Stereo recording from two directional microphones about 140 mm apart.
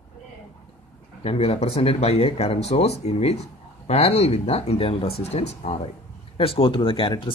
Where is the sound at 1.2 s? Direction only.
45° left (ahead or behind).